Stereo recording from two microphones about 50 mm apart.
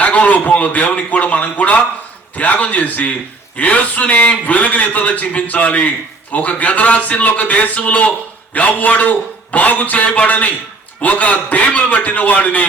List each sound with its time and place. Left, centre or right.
0.0 s a man's voice: left